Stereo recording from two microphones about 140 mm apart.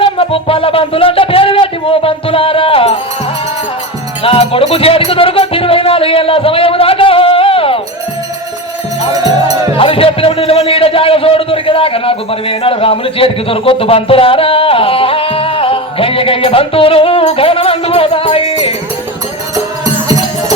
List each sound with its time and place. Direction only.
0.0 s music: 40° left (ahead or behind)
4.2 s music: 40° left (ahead or behind)
9.1 s music: 25° right (ahead or behind)
9.7 s music: 40° left (ahead or behind)
19.5 s music: 25° right (ahead or behind)